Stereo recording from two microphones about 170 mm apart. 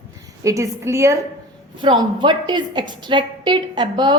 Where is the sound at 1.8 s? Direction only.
30° right (ahead or behind).